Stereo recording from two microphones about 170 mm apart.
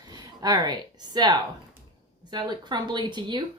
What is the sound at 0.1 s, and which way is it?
A woman's voice, 25° right (ahead or behind).